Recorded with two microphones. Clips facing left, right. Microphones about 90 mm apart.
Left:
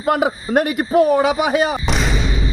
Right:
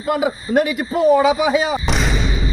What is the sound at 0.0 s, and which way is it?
A man's voice, 55° left (ahead or behind).